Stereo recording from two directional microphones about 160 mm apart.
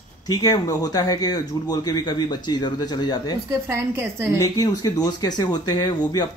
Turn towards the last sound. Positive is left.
turn(degrees=25)  # may be behind; listen again after turning